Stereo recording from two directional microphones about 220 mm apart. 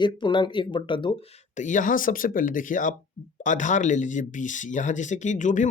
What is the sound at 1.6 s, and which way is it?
Speech, 35° left (ahead or behind).